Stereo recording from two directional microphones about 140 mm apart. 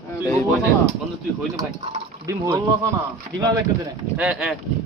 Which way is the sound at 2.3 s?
20° right (ahead or behind).